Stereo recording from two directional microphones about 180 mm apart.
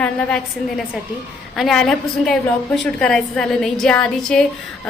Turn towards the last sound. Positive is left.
turn(degrees=5)  # may be behind; listen again after turning